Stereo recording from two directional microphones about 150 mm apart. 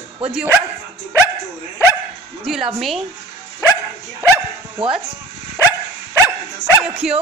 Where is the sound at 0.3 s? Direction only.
5° right (ahead or behind).